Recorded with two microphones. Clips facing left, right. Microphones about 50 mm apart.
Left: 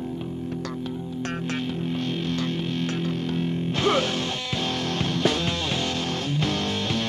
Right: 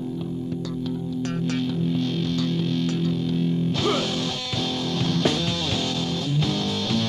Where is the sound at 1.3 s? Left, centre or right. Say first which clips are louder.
Right 3 dB; left.